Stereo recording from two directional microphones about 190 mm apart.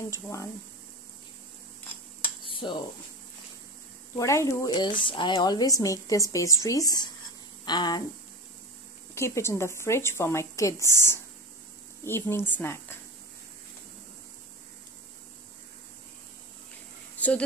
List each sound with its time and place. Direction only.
0.1 s a woman's voice: 15° left (ahead or behind)
2.4 s a sound: 25° left (ahead or behind)
4.2 s a woman's voice: 15° left (ahead or behind)
9.1 s a woman's voice: 15° left (ahead or behind)